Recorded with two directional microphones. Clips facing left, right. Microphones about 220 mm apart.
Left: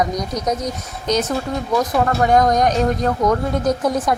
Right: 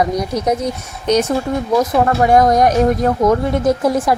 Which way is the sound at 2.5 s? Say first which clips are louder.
Right 4 dB; 5° right (ahead or behind).